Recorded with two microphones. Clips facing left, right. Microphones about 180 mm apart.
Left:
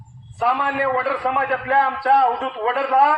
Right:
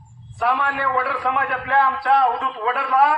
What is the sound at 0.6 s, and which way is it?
A man's voice, 25° left (ahead or behind).